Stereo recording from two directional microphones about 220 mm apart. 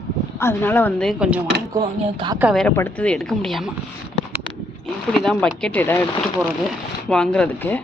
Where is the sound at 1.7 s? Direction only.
20° right (ahead or behind).